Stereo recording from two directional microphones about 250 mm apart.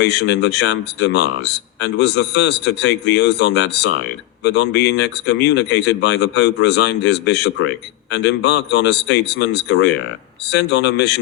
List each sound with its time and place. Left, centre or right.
0.0 s speech: left